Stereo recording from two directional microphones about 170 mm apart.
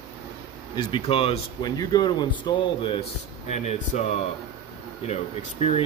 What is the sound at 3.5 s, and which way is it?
Speech, 40° left (ahead or behind).